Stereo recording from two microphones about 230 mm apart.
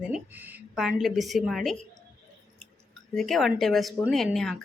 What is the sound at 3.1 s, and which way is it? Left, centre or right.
Speech, centre.